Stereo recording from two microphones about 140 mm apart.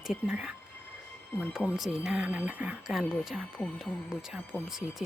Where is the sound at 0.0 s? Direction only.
5° right (ahead or behind).